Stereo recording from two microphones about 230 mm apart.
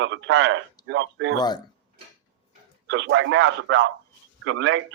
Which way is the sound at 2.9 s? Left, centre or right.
Right.